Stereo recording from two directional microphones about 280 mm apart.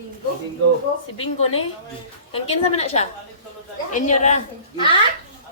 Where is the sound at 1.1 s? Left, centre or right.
Centre.